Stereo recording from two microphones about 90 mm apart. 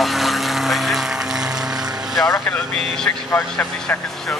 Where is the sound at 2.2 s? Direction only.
25° left (ahead or behind).